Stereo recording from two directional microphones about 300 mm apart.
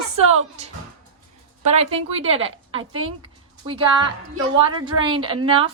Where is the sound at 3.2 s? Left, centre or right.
Centre.